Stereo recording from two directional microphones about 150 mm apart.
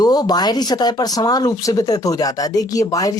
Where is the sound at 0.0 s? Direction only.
25° left (ahead or behind).